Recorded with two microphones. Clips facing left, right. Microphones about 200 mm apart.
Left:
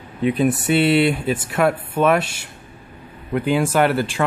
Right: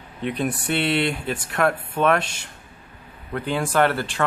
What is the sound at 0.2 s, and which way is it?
Speech, 5° left (ahead or behind).